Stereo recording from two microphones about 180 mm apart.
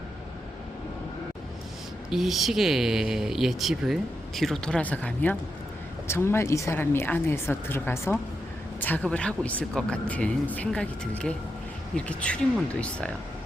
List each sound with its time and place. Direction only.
2.0 s speech: centre (ahead or behind)